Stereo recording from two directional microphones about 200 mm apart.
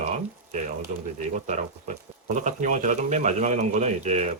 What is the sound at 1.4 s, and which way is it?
Speech, 35° right (ahead or behind).